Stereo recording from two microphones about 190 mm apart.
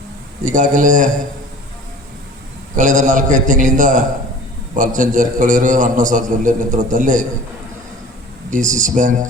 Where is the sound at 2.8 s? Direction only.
40° right (ahead or behind).